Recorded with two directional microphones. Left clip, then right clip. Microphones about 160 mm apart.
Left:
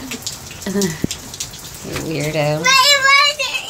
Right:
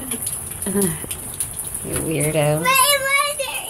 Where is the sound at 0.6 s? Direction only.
20° left (ahead or behind).